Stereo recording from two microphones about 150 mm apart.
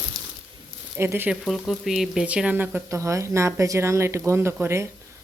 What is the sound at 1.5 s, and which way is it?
Speech, centre (ahead or behind).